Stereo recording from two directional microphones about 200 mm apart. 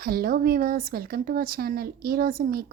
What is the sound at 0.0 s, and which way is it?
Speech, 50° right (ahead or behind).